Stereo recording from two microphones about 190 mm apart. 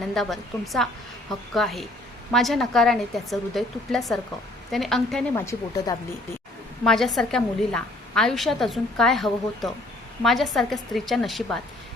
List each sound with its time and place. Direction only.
0.1 s a woman's voice: centre (ahead or behind)
5.3 s speech: 20° left (ahead or behind)
6.8 s a woman's voice: centre (ahead or behind)